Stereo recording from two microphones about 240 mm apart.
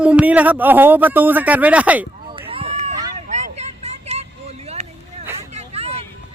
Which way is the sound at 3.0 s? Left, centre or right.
Right.